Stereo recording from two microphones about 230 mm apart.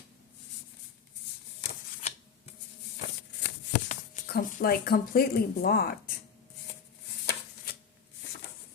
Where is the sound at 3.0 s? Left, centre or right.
Left.